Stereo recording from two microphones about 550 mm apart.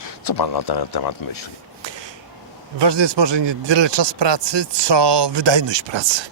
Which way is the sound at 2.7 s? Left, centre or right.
Right.